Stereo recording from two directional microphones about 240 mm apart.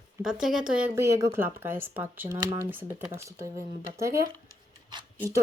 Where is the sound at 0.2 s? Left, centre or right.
Centre.